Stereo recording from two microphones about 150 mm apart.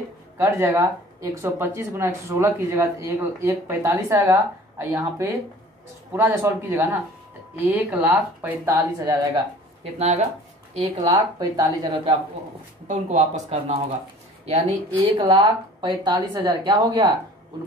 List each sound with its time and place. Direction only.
0.4 s speech: 15° right (ahead or behind)
9.9 s speech: 45° right (ahead or behind)
11.1 s speech: 25° right (ahead or behind)
12.8 s speech: 50° right (ahead or behind); by 17.1 s 30° right (ahead or behind)